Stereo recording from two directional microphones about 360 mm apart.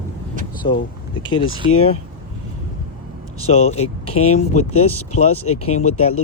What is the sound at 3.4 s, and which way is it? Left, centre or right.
Speech, centre.